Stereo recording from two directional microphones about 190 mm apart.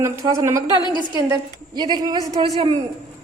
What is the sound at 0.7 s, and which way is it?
Speech, 25° left (ahead or behind).